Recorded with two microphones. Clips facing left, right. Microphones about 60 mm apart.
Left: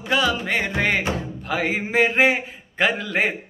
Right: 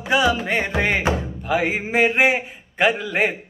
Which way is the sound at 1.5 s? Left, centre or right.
Centre.